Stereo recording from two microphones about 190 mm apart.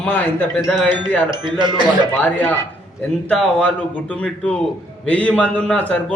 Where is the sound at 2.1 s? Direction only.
10° left (ahead or behind).